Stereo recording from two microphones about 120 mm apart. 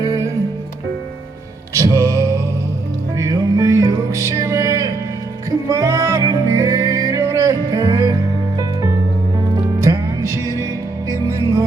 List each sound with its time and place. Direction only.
1.7 s music: 25° right (ahead or behind)
9.8 s music: 25° right (ahead or behind)